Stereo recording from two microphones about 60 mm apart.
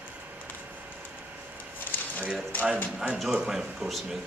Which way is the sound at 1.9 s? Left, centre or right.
Left.